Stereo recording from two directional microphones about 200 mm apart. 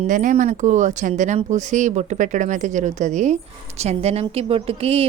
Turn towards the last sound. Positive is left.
turn(degrees=-30)  # may be behind; listen again after turning